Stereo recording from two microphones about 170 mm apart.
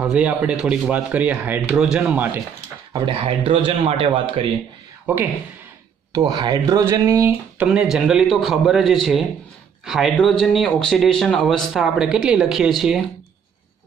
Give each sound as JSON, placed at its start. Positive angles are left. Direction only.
{"t": 0.0, "sound": "speech", "side_deg": -10}
{"t": 2.9, "sound": "speech", "side_deg": -30}
{"t": 5.0, "sound": "speech", "side_deg": -10}
{"t": 6.1, "sound": "speech", "side_deg": -25}